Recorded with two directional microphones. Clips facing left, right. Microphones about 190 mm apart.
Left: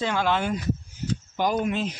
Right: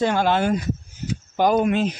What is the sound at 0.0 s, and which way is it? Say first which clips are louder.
Speech: right 5 dB; 45° right (ahead or behind).